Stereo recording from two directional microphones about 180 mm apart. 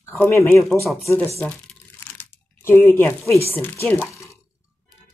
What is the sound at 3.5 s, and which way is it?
Speech, 10° left (ahead or behind).